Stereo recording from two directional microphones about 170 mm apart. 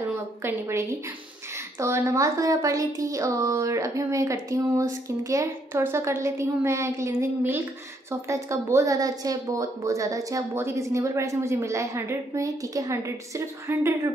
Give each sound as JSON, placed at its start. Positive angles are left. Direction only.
{"t": 0.4, "sound": "a woman's voice", "side_deg": -15}